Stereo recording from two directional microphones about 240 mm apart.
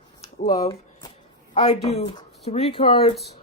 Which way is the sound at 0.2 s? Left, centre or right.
Left.